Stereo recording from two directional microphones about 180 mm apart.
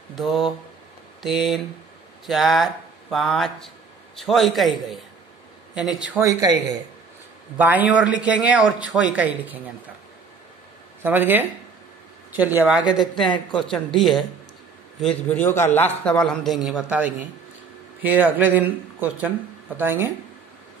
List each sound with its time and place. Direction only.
0.2 s speech: centre (ahead or behind)
6.2 s speech: 20° right (ahead or behind)
11.0 s speech: 10° right (ahead or behind)
13.1 s a woman's voice: 25° left (ahead or behind)
13.5 s speech: centre (ahead or behind)
15.2 s a man's voice: 10° left (ahead or behind)
18.0 s speech: 10° right (ahead or behind)